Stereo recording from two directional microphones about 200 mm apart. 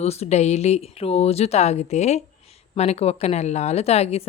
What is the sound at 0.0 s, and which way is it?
A woman's voice, 30° left (ahead or behind).